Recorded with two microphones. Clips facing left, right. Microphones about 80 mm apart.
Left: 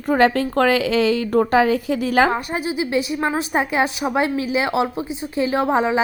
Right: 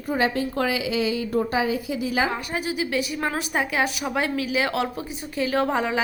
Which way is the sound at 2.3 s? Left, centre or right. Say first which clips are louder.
Left 5 dB; left.